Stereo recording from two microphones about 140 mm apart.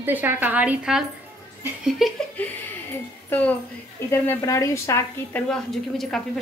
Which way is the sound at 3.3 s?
15° left (ahead or behind).